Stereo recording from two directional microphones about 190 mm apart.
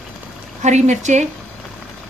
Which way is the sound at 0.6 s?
40° right (ahead or behind).